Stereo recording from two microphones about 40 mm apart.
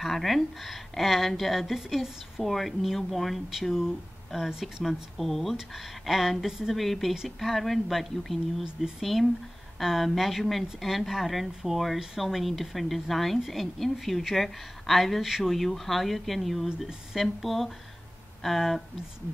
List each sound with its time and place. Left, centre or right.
0.0 s speech: centre
4.5 s speech: centre
4.8 s speech: centre
16.6 s speech: centre
17.1 s speech: centre